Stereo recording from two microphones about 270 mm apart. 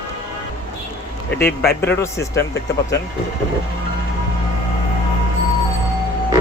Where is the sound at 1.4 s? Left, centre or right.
Left.